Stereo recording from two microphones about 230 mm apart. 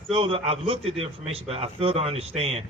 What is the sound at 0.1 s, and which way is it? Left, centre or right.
A man's voice, right.